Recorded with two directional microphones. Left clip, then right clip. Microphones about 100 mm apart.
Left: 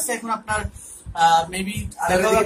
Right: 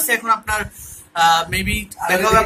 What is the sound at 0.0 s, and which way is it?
Speech, 15° left (ahead or behind).